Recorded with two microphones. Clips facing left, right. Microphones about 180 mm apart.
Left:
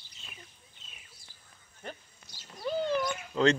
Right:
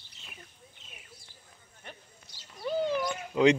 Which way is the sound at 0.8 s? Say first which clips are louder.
Right 3 dB; 60° right (ahead or behind).